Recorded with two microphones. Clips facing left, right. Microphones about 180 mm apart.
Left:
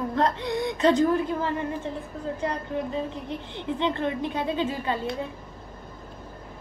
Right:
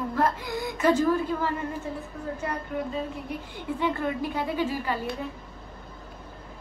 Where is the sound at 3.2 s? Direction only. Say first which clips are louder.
Left 2 dB; 25° left (ahead or behind).